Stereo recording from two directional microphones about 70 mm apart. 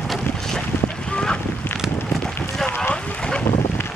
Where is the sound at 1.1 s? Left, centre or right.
Centre.